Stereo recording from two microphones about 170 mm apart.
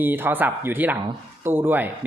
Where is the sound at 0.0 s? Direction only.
10° right (ahead or behind).